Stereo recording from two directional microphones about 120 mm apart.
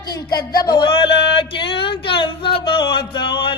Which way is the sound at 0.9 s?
45° left (ahead or behind).